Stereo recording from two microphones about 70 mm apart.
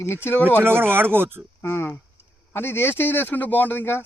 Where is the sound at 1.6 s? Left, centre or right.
Left.